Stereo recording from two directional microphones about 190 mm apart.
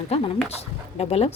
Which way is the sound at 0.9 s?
30° left (ahead or behind).